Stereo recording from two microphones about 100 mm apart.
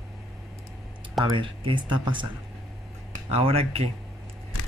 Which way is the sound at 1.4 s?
55° right (ahead or behind).